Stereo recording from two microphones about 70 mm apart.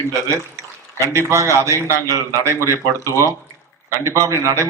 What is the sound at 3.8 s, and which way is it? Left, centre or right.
Speech, right.